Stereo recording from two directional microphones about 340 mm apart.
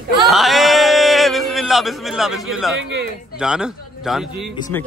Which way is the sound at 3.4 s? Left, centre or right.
Centre.